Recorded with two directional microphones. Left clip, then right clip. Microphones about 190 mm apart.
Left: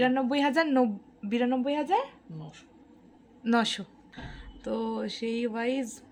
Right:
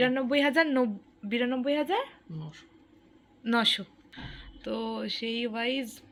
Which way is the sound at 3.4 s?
15° left (ahead or behind).